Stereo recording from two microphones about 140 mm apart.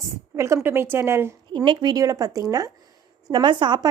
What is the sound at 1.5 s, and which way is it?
Speech, 35° right (ahead or behind).